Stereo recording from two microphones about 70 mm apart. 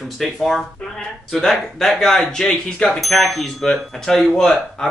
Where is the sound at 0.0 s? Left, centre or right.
Centre.